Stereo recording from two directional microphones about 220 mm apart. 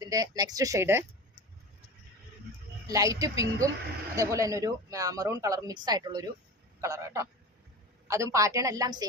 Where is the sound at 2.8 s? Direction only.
15° right (ahead or behind).